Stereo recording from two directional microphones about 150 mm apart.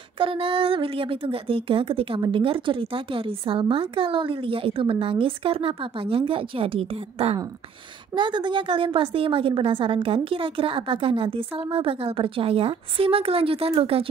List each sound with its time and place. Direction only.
0.2 s speech: 35° right (ahead or behind)